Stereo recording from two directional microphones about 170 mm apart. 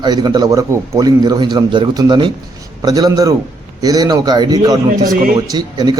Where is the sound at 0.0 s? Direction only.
25° right (ahead or behind).